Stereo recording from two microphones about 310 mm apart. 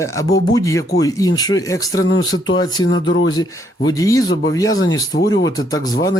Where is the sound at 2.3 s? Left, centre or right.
Left.